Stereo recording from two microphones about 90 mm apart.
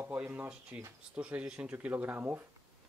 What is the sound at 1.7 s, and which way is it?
Speech, 25° right (ahead or behind).